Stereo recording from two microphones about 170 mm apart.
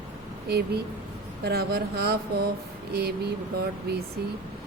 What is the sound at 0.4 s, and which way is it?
Speech, 70° right (ahead or behind).